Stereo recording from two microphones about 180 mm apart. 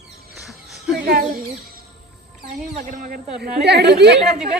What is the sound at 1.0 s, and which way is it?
Speech, 50° right (ahead or behind).